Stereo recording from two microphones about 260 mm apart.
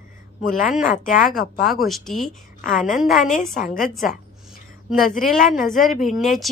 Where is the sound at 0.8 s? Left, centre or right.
Left.